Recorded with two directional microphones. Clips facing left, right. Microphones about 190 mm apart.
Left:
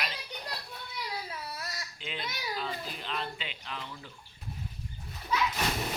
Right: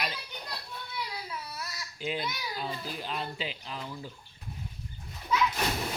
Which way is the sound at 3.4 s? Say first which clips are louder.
Right 4 dB; 35° right (ahead or behind).